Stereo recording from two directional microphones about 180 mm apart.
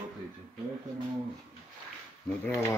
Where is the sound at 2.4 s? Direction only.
10° left (ahead or behind).